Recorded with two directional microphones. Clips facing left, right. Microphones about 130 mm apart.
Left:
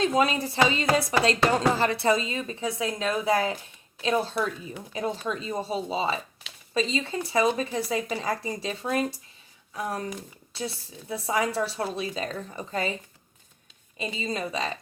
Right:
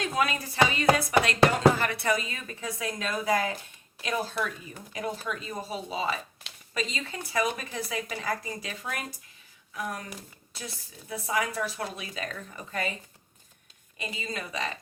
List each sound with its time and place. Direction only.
0.0 s a woman's voice: 25° left (ahead or behind)
14.0 s a woman's voice: 25° left (ahead or behind)